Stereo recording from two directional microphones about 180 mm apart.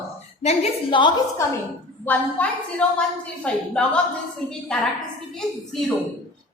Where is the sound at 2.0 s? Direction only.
10° left (ahead or behind).